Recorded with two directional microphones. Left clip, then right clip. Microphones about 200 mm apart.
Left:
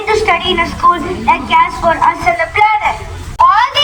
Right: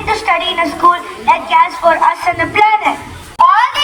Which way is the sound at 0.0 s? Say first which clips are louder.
Left 2 dB; 15° right (ahead or behind).